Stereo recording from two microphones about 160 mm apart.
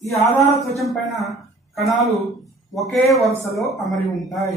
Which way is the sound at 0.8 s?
Centre (ahead or behind).